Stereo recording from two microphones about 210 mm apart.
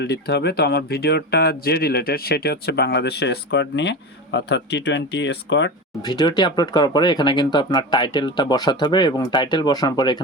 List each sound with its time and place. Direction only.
0.0 s speech: 55° left (ahead or behind)
6.0 s speech: 20° left (ahead or behind)